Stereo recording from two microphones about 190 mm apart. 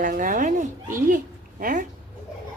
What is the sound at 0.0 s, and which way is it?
A woman's voice, 45° right (ahead or behind).